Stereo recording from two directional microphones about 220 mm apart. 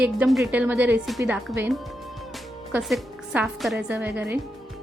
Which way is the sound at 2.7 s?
5° right (ahead or behind).